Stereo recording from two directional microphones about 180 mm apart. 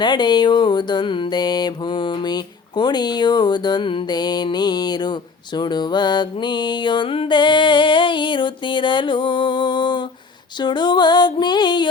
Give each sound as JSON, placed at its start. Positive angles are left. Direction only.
{"t": 0.0, "sound": "mantra", "side_deg": 25}